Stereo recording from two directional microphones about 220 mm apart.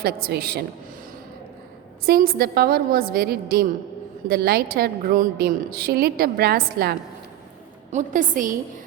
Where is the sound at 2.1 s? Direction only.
45° right (ahead or behind).